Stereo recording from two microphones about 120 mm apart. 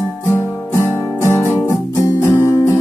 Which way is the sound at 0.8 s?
20° left (ahead or behind).